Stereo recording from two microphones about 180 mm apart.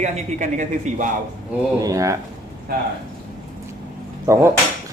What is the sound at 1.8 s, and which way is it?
Speech, 15° right (ahead or behind).